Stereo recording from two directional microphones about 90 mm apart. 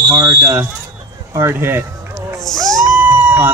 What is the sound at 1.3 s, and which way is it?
Speech, 25° right (ahead or behind).